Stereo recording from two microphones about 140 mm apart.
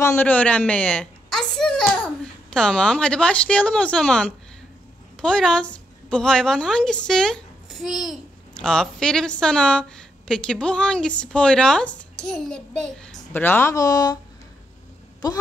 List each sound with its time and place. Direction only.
0.0 s a sound: 15° left (ahead or behind)
2.5 s a woman's voice: 5° left (ahead or behind); by 14.1 s 25° left (ahead or behind)
15.2 s speech: 30° left (ahead or behind)